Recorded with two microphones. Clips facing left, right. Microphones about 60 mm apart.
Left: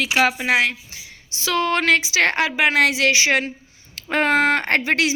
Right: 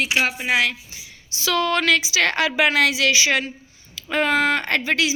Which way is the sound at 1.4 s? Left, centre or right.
Left.